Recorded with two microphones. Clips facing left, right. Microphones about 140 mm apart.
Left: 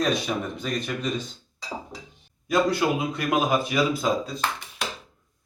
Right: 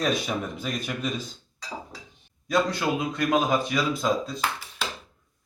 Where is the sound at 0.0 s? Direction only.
Centre (ahead or behind).